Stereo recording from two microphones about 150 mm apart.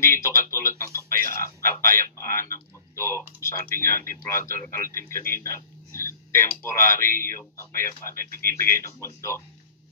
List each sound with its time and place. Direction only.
0.0 s speech: 20° left (ahead or behind)